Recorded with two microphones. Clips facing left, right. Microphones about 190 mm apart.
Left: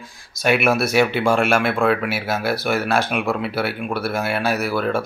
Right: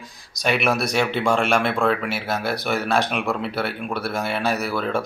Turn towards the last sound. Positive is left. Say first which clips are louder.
# left 3 dB
turn(degrees=5)  # may be behind; listen again after turning